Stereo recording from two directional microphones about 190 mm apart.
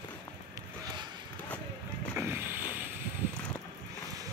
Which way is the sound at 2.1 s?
10° right (ahead or behind).